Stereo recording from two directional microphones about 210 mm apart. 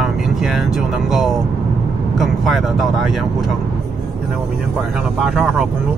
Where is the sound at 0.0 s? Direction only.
Centre (ahead or behind).